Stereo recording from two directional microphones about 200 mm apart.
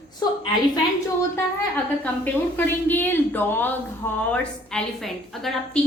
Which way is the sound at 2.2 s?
10° left (ahead or behind).